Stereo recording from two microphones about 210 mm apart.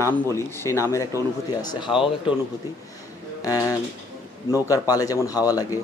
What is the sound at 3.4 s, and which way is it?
Speech, 15° left (ahead or behind).